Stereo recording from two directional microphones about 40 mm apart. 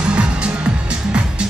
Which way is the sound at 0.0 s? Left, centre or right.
Right.